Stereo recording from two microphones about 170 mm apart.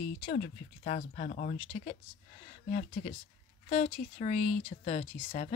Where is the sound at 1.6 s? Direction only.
40° left (ahead or behind).